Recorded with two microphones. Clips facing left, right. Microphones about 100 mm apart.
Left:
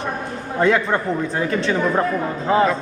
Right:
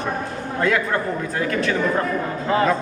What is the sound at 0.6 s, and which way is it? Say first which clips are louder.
Speech: left 3 dB; 25° left (ahead or behind).